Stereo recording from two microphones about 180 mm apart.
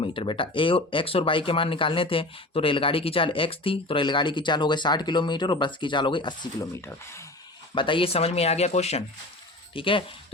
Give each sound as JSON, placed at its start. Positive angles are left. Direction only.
{"t": 0.0, "sound": "speech", "side_deg": 30}
{"t": 7.8, "sound": "speech", "side_deg": 30}